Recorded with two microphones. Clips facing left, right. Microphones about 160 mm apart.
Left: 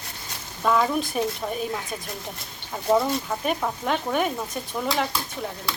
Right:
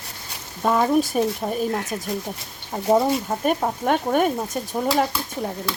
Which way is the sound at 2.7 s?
30° right (ahead or behind).